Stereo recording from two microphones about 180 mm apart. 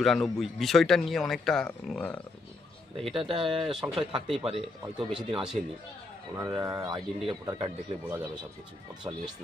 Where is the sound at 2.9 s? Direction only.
30° right (ahead or behind).